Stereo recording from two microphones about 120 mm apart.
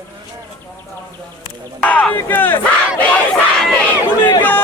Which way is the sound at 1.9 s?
10° left (ahead or behind).